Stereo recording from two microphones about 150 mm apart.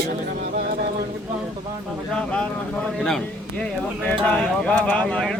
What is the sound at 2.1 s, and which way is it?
Speech, 5° left (ahead or behind).